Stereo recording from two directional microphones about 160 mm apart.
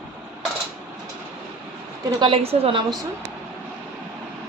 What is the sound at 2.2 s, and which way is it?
Speech, 35° right (ahead or behind).